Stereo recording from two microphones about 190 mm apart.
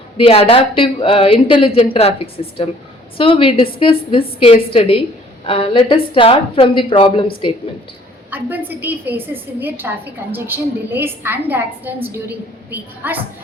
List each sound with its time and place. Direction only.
0.2 s a woman's voice: 30° left (ahead or behind)
8.3 s a woman's voice: 10° right (ahead or behind)